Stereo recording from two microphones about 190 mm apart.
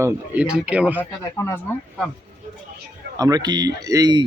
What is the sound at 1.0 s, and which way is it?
Speech, 15° left (ahead or behind).